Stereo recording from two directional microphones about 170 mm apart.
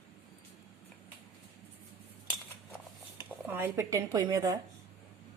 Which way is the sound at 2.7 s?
10° right (ahead or behind).